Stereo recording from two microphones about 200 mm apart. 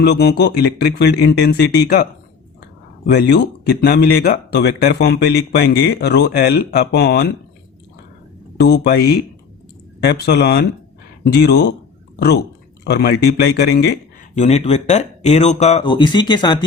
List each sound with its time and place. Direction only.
0.0 s speech: 55° left (ahead or behind)
3.1 s speech: 55° left (ahead or behind)
8.7 s speech: 50° left (ahead or behind)
12.8 s speech: 55° left (ahead or behind)
14.3 s speech: 35° left (ahead or behind)